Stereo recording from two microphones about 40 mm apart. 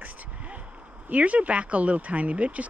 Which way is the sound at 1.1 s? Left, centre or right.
Right.